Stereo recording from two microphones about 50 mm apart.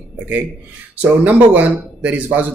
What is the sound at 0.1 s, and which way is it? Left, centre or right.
A man's voice, right.